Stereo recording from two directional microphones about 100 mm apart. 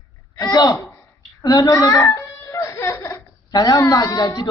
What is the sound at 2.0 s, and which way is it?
Baby cry, 30° left (ahead or behind).